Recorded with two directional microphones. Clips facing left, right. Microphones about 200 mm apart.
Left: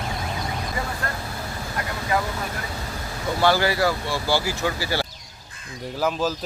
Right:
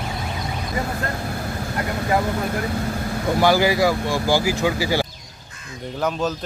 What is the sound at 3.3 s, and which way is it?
Speech, 15° right (ahead or behind).